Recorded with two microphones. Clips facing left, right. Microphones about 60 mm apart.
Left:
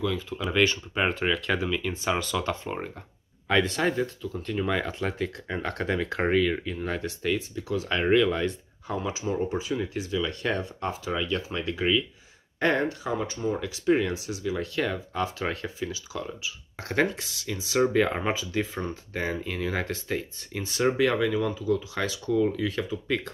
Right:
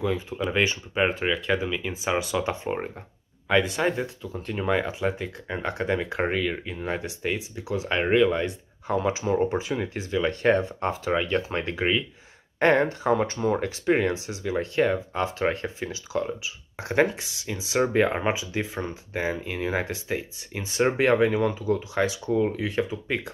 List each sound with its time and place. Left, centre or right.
0.0 s speech: right
3.4 s speech: centre
8.8 s speech: right
16.7 s speech: right
21.9 s speech: right